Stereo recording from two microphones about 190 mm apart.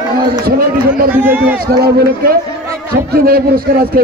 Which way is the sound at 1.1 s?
10° right (ahead or behind).